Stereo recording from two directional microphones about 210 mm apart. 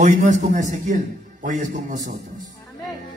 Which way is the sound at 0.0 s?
35° right (ahead or behind).